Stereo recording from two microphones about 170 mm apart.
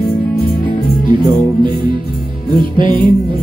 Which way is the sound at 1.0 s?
30° right (ahead or behind).